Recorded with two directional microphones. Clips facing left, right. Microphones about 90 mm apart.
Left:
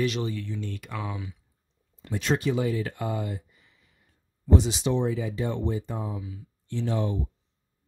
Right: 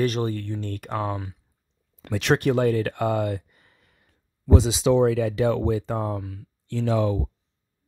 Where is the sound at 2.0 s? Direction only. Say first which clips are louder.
Right 5 dB; 70° right (ahead or behind).